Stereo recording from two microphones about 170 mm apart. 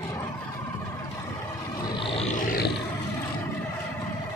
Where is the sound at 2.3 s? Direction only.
60° left (ahead or behind).